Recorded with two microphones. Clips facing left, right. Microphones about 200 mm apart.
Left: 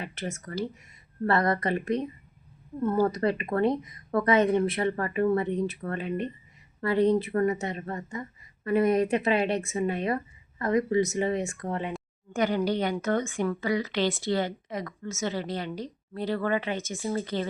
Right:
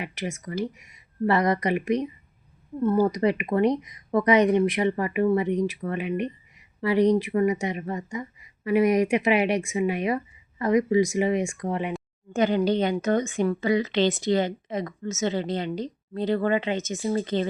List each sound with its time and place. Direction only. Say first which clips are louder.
0.0 s speech: right 3 dB; 10° right (ahead or behind)